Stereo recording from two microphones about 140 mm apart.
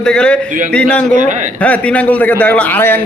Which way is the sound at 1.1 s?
60° right (ahead or behind).